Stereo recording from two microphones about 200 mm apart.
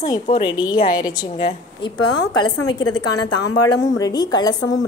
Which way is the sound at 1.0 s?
20° left (ahead or behind).